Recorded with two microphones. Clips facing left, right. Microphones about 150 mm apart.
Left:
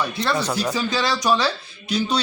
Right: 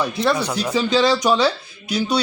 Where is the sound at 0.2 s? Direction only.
15° right (ahead or behind).